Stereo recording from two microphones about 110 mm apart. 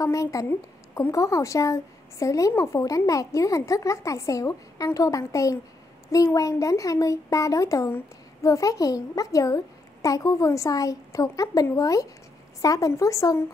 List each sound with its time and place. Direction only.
0.0 s a woman's voice: 30° left (ahead or behind)